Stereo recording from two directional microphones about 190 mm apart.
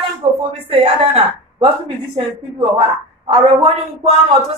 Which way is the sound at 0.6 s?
30° right (ahead or behind).